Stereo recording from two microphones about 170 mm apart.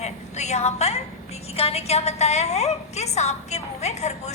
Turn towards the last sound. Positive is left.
turn(degrees=40)  # may be behind; listen again after turning